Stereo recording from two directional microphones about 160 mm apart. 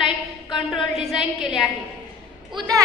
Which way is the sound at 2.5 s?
30° right (ahead or behind).